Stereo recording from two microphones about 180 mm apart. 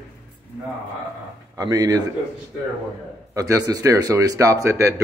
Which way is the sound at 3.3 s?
20° right (ahead or behind).